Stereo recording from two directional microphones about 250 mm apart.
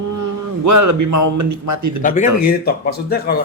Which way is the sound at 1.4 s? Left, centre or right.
Right.